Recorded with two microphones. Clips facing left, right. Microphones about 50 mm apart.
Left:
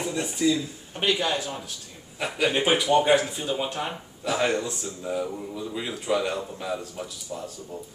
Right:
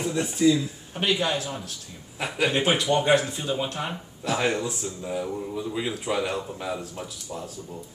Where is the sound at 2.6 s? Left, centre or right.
Centre.